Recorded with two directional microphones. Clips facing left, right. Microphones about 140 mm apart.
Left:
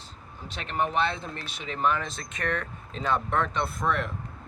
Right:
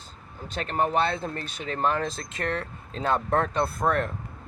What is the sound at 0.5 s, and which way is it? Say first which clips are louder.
Speech: right 3 dB; 45° right (ahead or behind).